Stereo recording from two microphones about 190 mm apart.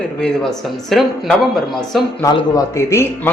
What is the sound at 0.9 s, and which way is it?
Speech, centre (ahead or behind).